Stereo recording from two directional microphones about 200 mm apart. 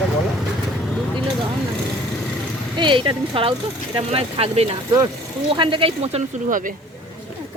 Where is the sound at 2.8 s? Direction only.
25° right (ahead or behind); by 6.7 s 40° right (ahead or behind).